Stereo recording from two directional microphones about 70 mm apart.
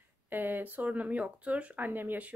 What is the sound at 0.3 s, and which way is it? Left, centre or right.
A woman's voice, right.